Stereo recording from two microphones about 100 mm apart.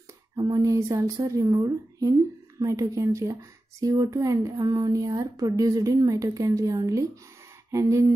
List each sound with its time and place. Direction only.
0.4 s speech: 35° right (ahead or behind)